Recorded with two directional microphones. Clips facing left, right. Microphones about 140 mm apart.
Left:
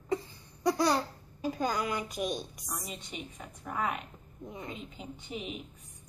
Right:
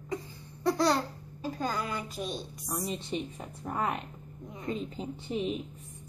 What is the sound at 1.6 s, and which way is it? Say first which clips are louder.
A woman's voice: left 1 dB; 15° left (ahead or behind).